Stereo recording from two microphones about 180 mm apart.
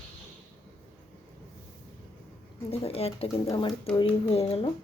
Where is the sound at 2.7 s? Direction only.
35° left (ahead or behind).